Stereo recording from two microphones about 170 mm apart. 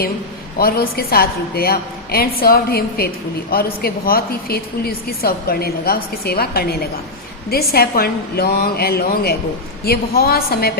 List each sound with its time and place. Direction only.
0.6 s a woman's voice: 65° left (ahead or behind)